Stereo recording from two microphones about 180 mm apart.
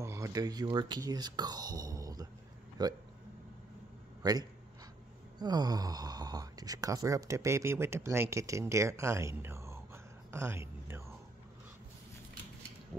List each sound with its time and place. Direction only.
0.0 s speech: 15° right (ahead or behind)
4.2 s a man's voice: 20° right (ahead or behind)
10.3 s a sound: 15° right (ahead or behind)